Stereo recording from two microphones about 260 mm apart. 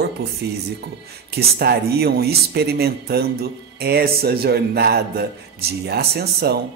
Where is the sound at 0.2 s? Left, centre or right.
Right.